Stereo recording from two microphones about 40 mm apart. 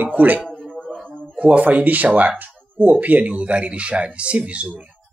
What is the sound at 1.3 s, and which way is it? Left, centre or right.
Speech, right.